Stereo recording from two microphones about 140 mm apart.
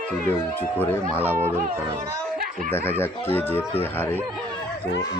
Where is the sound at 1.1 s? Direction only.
15° right (ahead or behind).